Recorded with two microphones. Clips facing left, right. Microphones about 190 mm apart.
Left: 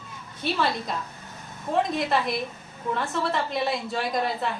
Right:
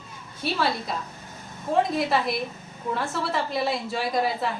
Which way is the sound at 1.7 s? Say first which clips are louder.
Right 1 dB; centre (ahead or behind).